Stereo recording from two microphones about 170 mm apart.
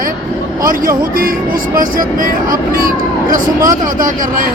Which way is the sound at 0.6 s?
55° right (ahead or behind).